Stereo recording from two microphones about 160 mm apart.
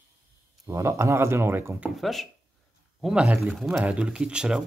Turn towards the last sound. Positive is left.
turn(degrees=-5)  # may be behind; listen again after turning